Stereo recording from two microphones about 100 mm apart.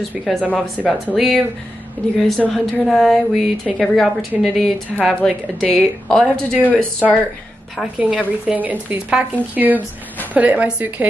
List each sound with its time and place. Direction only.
0.2 s a woman's voice: 5° left (ahead or behind)
6.5 s speech: 15° right (ahead or behind)
6.8 s speech: 10° left (ahead or behind)
8.0 s speech: 10° right (ahead or behind)